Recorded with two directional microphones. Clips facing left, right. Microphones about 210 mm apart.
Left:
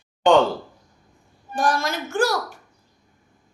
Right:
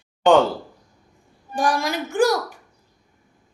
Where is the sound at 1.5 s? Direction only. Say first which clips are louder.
Right 1 dB; 15° right (ahead or behind).